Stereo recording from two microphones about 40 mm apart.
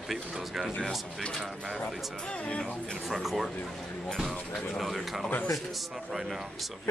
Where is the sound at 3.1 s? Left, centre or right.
Centre.